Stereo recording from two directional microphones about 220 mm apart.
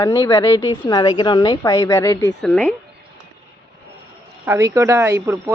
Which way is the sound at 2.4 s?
5° left (ahead or behind).